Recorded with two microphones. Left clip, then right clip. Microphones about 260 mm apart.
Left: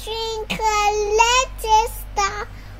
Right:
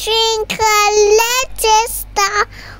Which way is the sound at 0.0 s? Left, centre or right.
Right.